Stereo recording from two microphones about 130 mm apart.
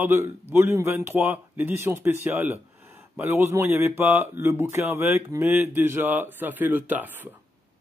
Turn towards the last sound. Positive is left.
turn(degrees=-15)  # may be behind; listen again after turning